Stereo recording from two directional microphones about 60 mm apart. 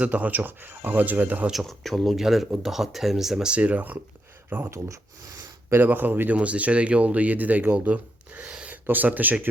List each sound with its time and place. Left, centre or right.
0.0 s speech: right
1.6 s speech: centre; by 4.7 s right
5.7 s speech: right
8.7 s speech: right